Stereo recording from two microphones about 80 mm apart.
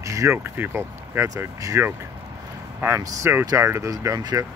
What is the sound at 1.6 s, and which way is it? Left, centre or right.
Speech, right.